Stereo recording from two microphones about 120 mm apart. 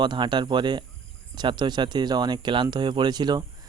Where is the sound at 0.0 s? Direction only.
40° right (ahead or behind).